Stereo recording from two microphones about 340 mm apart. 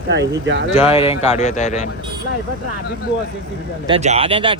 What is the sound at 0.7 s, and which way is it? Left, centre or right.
Speech, centre.